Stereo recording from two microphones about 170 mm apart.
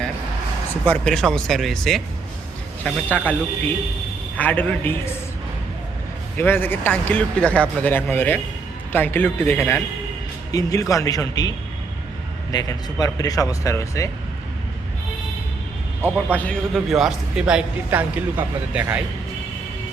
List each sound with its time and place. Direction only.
0.9 s a man's voice: 5° left (ahead or behind)
4.4 s speech: 10° left (ahead or behind)
6.3 s speech: 10° left (ahead or behind)
16.3 s a man's voice: 5° left (ahead or behind)